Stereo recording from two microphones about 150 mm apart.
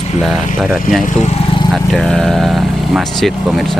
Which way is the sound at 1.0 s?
55° left (ahead or behind).